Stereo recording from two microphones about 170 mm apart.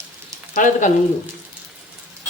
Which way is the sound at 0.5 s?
50° left (ahead or behind).